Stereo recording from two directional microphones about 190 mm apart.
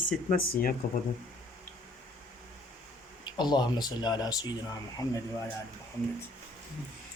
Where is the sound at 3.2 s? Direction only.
25° left (ahead or behind).